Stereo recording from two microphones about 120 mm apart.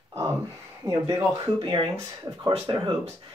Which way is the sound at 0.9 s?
25° right (ahead or behind).